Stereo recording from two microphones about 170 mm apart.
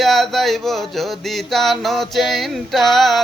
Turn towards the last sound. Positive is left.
turn(degrees=0)  # may be behind; listen again after turning